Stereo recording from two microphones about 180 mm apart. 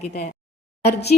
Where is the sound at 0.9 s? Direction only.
65° left (ahead or behind).